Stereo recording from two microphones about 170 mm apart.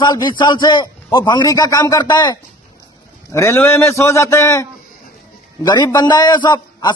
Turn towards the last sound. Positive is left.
turn(degrees=25)  # may be behind; listen again after turning